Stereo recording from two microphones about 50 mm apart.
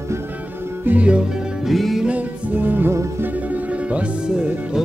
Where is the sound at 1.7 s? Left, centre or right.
Centre.